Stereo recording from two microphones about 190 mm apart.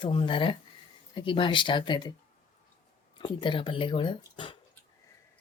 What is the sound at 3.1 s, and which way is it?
Speech, 25° left (ahead or behind).